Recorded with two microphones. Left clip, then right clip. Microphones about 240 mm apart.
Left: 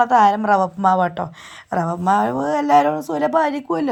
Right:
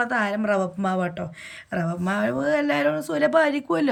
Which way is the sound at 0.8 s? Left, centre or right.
Centre.